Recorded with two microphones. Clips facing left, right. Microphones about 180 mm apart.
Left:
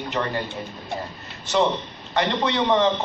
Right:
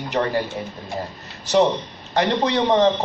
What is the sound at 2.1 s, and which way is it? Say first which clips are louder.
Speech: right 3 dB; 40° right (ahead or behind).